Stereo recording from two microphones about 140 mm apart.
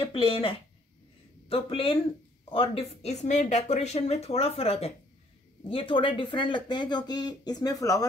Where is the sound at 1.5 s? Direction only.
40° left (ahead or behind).